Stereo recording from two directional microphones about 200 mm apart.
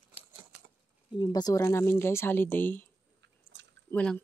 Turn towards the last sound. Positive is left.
turn(degrees=5)  # may be behind; listen again after turning